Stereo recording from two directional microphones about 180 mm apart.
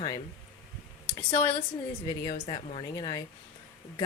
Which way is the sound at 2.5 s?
30° left (ahead or behind).